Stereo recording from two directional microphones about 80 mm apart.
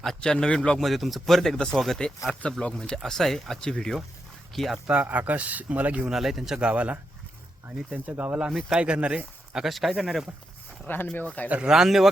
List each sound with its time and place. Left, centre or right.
0.0 s speech: centre
0.8 s speech: centre
4.9 s speech: centre
6.1 s speech: centre
6.7 s speech: centre
8.4 s speech: centre
10.8 s speech: left
11.4 s speech: centre
11.7 s speech: centre